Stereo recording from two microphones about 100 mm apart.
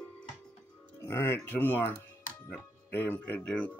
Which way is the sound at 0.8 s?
25° left (ahead or behind).